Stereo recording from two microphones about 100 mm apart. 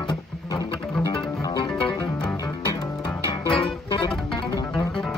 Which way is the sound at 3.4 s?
55° left (ahead or behind).